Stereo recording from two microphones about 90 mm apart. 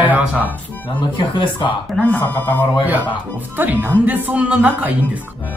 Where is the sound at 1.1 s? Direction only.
65° left (ahead or behind).